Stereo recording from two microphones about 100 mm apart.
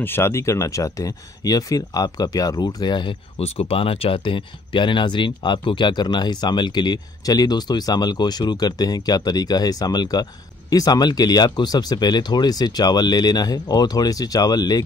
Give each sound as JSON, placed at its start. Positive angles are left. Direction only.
{"t": 0.0, "sound": "speech", "side_deg": 25}
{"t": 3.3, "sound": "speech", "side_deg": 90}